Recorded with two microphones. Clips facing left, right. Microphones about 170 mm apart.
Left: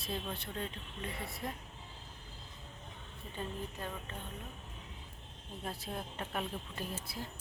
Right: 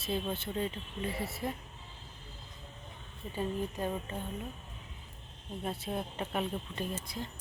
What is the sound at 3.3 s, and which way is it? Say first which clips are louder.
Speech: right 7 dB; 15° right (ahead or behind).